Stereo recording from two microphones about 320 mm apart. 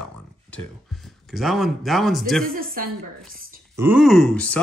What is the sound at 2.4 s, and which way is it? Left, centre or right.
Speech, right.